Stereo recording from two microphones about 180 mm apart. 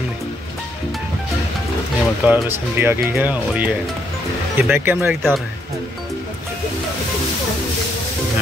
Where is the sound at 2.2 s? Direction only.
10° right (ahead or behind).